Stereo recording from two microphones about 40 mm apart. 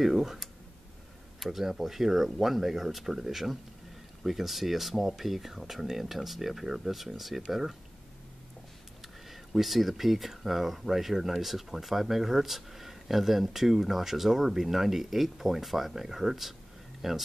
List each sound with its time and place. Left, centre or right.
0.0 s speech: centre
9.0 s speech: centre